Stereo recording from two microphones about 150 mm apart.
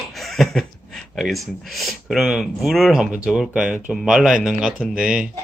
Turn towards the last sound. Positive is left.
turn(degrees=-5)  # may be behind; listen again after turning